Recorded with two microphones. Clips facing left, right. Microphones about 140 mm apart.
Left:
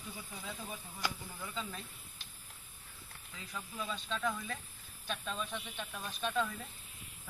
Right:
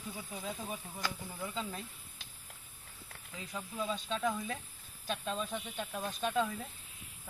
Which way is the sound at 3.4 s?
25° right (ahead or behind).